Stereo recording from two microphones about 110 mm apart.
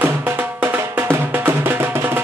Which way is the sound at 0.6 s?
20° right (ahead or behind).